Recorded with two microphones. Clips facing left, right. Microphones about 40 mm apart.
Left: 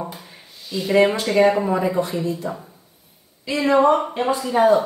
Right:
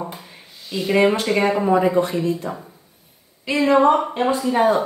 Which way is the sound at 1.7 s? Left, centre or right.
Centre.